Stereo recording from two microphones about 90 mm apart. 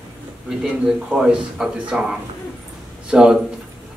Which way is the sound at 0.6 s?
5° right (ahead or behind).